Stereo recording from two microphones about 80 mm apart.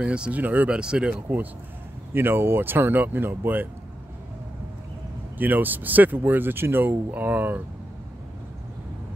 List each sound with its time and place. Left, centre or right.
0.0 s speech: centre
0.7 s speech: centre
2.1 s speech: right
5.4 s speech: right